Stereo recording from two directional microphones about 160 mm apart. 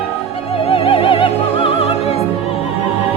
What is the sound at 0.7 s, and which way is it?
Music, 35° left (ahead or behind).